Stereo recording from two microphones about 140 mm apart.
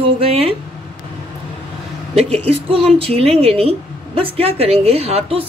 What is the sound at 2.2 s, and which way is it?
A woman's voice, 45° right (ahead or behind).